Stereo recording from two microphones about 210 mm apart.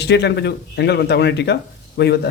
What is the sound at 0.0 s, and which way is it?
Speech, 55° left (ahead or behind).